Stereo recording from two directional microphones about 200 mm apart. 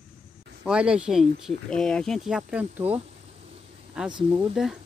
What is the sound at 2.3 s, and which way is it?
Speech, 5° right (ahead or behind).